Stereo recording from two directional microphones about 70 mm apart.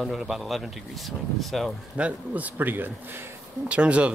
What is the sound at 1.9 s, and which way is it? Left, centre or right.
Speech, centre.